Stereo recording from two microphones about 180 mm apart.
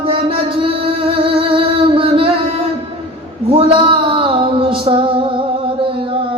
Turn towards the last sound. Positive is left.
turn(degrees=-30)  # may be behind; listen again after turning